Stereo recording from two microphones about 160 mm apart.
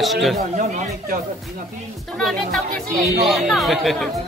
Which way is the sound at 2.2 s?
Centre (ahead or behind).